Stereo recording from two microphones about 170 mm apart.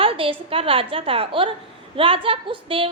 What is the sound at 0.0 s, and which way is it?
A woman's voice, 30° right (ahead or behind).